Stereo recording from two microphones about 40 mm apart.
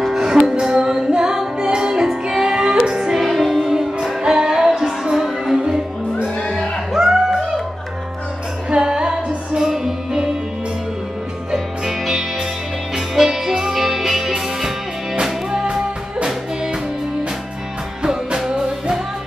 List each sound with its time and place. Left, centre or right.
0.0 s music: centre
0.3 s music: right
0.7 s female singing: centre
1.6 s music: centre
3.2 s music: centre
6.4 s music: centre
6.9 s music: centre
8.6 s music: right
11.5 s music: centre
15.7 s music: centre